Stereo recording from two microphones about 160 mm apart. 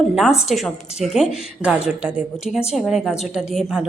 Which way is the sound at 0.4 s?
Centre (ahead or behind).